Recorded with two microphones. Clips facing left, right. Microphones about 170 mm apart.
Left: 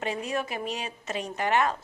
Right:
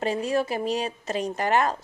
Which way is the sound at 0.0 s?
35° right (ahead or behind).